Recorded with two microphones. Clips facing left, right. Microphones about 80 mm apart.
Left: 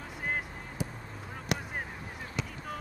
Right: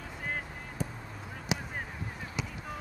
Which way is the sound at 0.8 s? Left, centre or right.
Centre.